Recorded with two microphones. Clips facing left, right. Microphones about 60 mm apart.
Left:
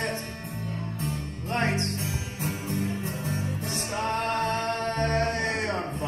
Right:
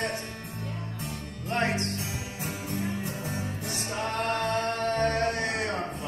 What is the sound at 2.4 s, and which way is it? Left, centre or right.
Music, left.